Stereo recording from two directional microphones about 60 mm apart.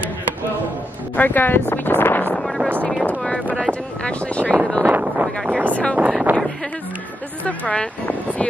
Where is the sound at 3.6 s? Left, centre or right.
Centre.